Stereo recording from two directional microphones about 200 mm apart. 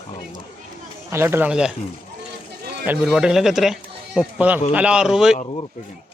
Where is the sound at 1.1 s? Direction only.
10° right (ahead or behind).